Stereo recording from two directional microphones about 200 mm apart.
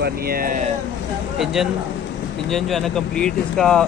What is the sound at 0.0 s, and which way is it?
Speech, 45° right (ahead or behind).